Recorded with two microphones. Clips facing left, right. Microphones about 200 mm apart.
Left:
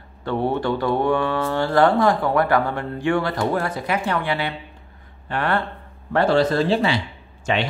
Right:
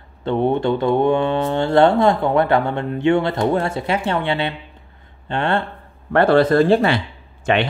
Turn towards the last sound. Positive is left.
turn(degrees=-60)  # may be behind; listen again after turning